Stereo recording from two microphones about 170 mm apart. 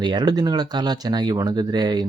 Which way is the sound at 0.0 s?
25° right (ahead or behind).